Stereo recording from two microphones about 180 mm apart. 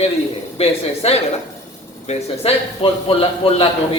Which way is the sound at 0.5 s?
35° left (ahead or behind).